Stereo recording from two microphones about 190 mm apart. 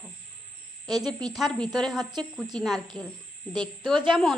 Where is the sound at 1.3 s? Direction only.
Centre (ahead or behind).